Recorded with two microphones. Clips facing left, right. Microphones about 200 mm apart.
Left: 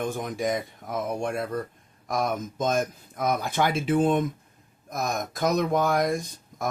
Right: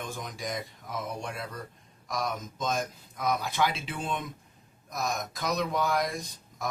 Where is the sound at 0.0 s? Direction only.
55° left (ahead or behind).